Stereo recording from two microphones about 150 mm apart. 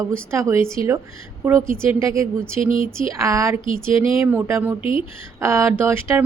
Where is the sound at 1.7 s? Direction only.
15° right (ahead or behind).